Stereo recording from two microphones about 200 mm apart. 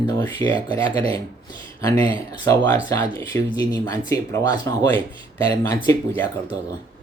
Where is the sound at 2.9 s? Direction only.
15° left (ahead or behind).